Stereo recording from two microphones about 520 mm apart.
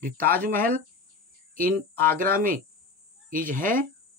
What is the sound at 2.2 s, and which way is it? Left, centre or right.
A man's voice, centre.